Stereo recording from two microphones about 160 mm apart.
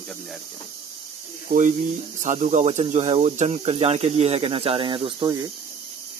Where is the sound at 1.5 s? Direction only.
65° right (ahead or behind).